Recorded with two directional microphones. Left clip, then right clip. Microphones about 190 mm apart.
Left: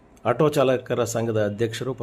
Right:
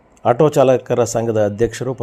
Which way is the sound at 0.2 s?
15° right (ahead or behind).